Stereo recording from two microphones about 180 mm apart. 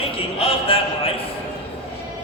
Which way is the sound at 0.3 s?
30° left (ahead or behind).